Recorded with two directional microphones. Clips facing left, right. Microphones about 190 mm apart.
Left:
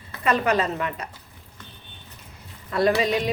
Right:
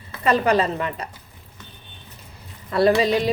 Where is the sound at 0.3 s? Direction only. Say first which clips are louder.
Right 3 dB; 30° right (ahead or behind).